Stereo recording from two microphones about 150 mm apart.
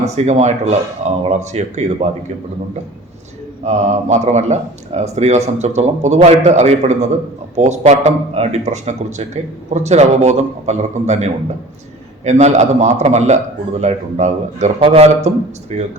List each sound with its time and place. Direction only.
0.3 s a man's voice: 50° right (ahead or behind)
3.6 s a man's voice: 50° right (ahead or behind)
14.8 s a man's voice: 40° right (ahead or behind)